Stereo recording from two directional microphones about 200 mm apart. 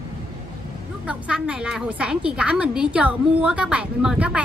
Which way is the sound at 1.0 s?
5° right (ahead or behind).